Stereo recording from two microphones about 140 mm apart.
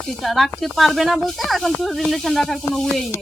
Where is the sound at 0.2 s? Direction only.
Centre (ahead or behind).